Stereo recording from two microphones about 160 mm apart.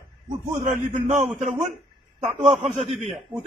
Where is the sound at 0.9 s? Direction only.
50° right (ahead or behind).